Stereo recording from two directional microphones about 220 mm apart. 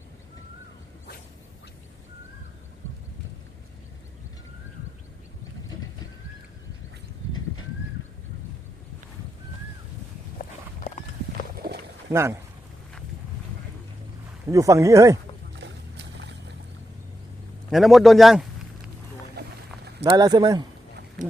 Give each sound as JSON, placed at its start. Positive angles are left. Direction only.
{"t": 11.5, "sound": "a sound", "side_deg": -45}
{"t": 12.1, "sound": "speech", "side_deg": -10}
{"t": 14.5, "sound": "speech", "side_deg": -15}
{"t": 15.6, "sound": "boat", "side_deg": -55}
{"t": 17.7, "sound": "speech", "side_deg": 0}
{"t": 20.1, "sound": "speech", "side_deg": -15}